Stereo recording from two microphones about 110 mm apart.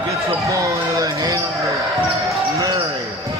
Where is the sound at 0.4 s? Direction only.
30° right (ahead or behind).